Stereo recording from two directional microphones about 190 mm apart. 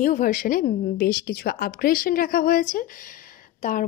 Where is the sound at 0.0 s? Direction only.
45° left (ahead or behind).